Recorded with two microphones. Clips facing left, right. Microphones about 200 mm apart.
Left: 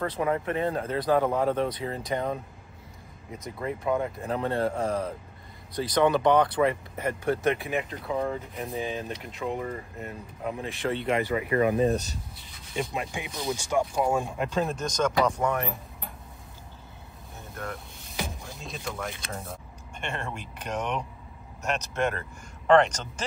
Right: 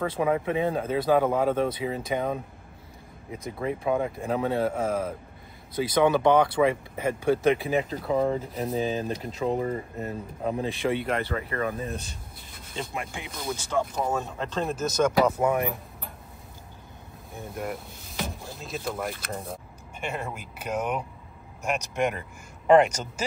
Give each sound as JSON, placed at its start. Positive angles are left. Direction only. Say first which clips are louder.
{"t": 0.0, "sound": "speech", "louder": "right 2 dB", "side_deg": -10}
{"t": 3.6, "sound": "speech", "louder": "right 1 dB", "side_deg": -20}
{"t": 7.7, "sound": "speech", "louder": "right 4 dB", "side_deg": -35}
{"t": 10.9, "sound": "speech", "louder": "left 2 dB", "side_deg": 0}
{"t": 11.2, "sound": "speech", "louder": "left 5 dB", "side_deg": 15}
{"t": 11.8, "sound": "speech", "louder": "left 10 dB", "side_deg": 40}
{"t": 12.4, "sound": "rub", "louder": "right 3 dB", "side_deg": -50}
{"t": 12.9, "sound": "speech", "louder": "left 2 dB", "side_deg": 20}
{"t": 14.6, "sound": "speech", "louder": "right 3 dB", "side_deg": 0}
{"t": 18.0, "sound": "music", "louder": "even", "side_deg": 0}
{"t": 18.5, "sound": "speech", "louder": "right 4 dB", "side_deg": 0}